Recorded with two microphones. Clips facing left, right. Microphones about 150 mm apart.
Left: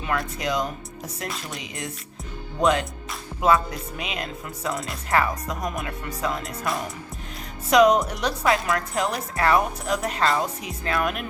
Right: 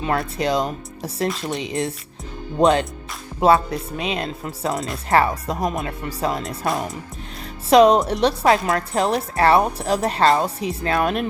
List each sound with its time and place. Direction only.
0.0 s a woman's voice: 30° right (ahead or behind)